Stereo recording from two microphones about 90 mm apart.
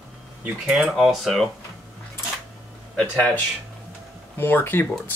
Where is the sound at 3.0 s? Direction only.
15° left (ahead or behind).